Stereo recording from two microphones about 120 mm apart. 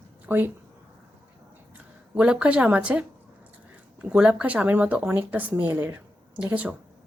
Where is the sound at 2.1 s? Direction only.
10° right (ahead or behind).